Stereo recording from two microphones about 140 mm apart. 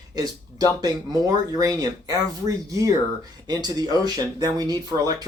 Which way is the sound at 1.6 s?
30° right (ahead or behind).